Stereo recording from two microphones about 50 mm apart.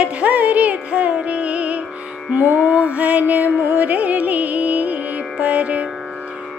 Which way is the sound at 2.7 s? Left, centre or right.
Right.